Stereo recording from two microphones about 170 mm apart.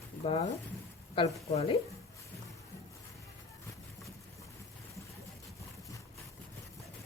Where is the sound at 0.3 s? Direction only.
35° left (ahead or behind).